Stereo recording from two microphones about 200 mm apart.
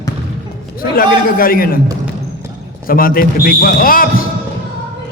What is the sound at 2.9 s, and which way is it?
A man's voice, 45° left (ahead or behind).